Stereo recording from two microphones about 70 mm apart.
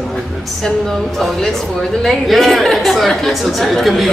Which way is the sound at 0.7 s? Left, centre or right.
Centre.